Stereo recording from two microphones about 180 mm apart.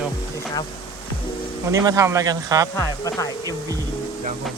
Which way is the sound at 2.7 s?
15° left (ahead or behind).